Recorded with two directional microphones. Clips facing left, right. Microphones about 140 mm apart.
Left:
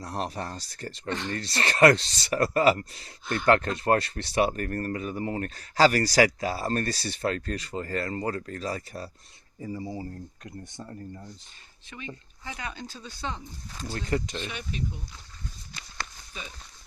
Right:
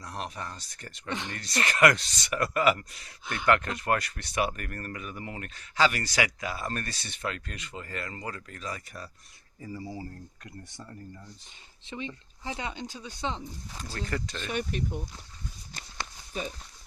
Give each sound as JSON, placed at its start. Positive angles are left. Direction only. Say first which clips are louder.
{"t": 0.0, "sound": "speech", "louder": "left 5 dB", "side_deg": 35}
{"t": 1.1, "sound": "speech", "louder": "left 3 dB", "side_deg": -15}
{"t": 1.4, "sound": "speech", "louder": "left 3 dB", "side_deg": 30}
{"t": 11.9, "sound": "speech", "louder": "right 3 dB", "side_deg": -25}
{"t": 13.9, "sound": "speech", "louder": "left 5 dB", "side_deg": 20}
{"t": 14.4, "sound": "speech", "louder": "right 3 dB", "side_deg": -50}